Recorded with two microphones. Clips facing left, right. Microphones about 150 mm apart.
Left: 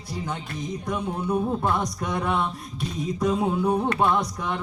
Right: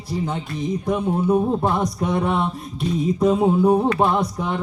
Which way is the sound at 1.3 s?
25° right (ahead or behind).